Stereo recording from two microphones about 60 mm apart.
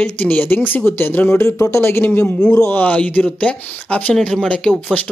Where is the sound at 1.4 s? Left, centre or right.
Left.